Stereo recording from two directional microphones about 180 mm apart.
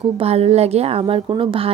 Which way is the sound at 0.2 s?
35° right (ahead or behind).